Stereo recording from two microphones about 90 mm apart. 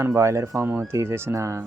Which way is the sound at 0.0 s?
30° right (ahead or behind).